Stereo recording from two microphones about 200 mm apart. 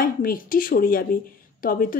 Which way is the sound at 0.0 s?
45° left (ahead or behind).